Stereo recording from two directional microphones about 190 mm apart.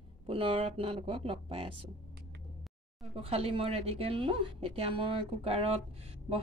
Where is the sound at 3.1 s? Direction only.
30° right (ahead or behind).